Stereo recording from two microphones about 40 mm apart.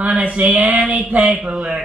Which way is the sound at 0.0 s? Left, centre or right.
Right.